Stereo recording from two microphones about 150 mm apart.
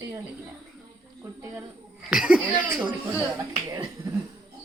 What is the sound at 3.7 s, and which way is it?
Speech, 25° right (ahead or behind).